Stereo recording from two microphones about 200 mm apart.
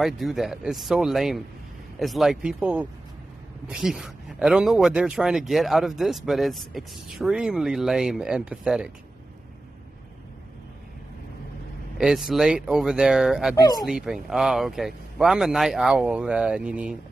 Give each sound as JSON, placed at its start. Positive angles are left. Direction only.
{"t": 0.0, "sound": "speech", "side_deg": 0}
{"t": 12.0, "sound": "speech", "side_deg": 0}
{"t": 13.6, "sound": "speech", "side_deg": 20}
{"t": 13.8, "sound": "speech", "side_deg": 0}